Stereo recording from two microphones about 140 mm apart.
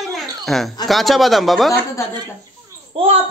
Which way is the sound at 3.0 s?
45° right (ahead or behind).